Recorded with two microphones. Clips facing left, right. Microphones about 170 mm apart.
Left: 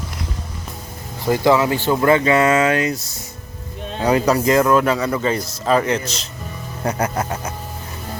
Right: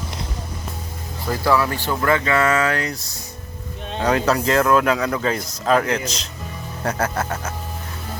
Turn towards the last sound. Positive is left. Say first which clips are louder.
# left 1 dB
turn(degrees=10)  # may be behind; listen again after turning